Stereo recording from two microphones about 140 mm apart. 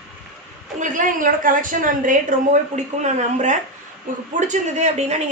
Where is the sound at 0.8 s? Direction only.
70° right (ahead or behind); by 5.2 s 55° right (ahead or behind).